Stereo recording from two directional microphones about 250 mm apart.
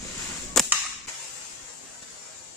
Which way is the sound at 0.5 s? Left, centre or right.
Centre.